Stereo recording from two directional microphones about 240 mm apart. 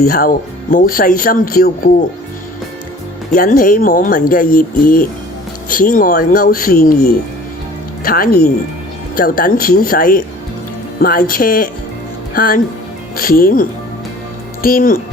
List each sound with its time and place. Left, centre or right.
0.0 s speech: left
3.3 s speech: left
8.0 s speech: left